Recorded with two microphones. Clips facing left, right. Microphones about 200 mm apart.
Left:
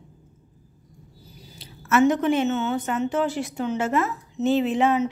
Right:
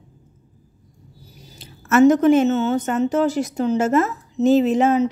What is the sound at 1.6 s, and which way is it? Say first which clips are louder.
A woman's voice: right 5 dB; 45° right (ahead or behind).